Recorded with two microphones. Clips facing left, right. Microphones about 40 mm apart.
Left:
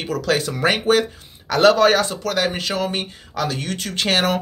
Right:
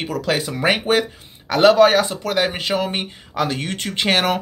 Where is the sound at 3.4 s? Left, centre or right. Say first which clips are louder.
Right 1 dB; right.